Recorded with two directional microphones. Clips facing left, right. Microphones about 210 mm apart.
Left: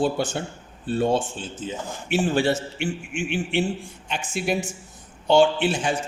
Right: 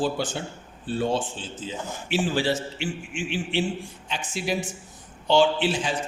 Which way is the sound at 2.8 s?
50° left (ahead or behind).